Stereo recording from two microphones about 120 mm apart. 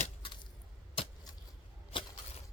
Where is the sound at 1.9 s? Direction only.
45° left (ahead or behind).